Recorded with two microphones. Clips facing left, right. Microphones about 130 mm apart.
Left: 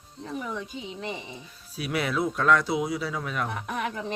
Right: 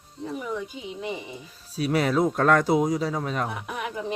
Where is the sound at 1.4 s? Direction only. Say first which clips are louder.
Right 11 dB; 40° right (ahead or behind).